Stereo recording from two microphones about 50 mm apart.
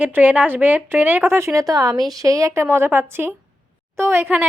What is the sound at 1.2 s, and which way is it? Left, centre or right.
A woman's voice, right.